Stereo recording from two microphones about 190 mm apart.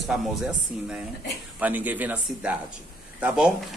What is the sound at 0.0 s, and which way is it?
A man's voice, centre (ahead or behind).